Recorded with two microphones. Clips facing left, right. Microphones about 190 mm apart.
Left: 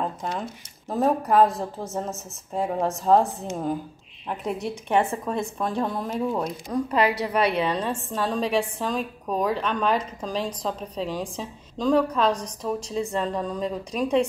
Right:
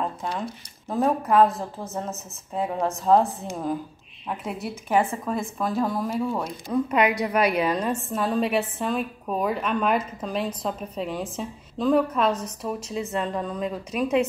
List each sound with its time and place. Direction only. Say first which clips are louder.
0.0 s speech: even; centre (ahead or behind)
7.0 s a woman's voice: even; 30° left (ahead or behind)
7.6 s a woman's voice: right 1 dB; 10° right (ahead or behind)